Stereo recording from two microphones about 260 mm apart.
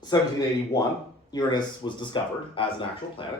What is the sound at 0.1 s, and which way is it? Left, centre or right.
Speech, centre.